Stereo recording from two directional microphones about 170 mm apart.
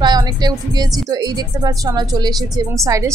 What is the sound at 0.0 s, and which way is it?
Speech, 25° right (ahead or behind).